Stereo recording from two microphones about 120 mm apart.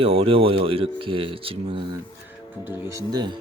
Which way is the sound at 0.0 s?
50° right (ahead or behind).